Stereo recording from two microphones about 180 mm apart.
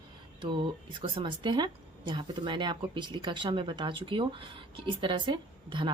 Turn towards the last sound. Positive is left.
turn(degrees=-25)  # may be behind; listen again after turning